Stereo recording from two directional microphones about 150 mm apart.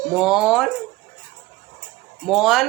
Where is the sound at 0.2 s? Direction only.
5° right (ahead or behind).